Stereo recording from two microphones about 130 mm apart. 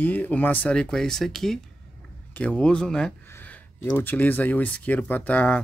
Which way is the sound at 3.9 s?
15° left (ahead or behind).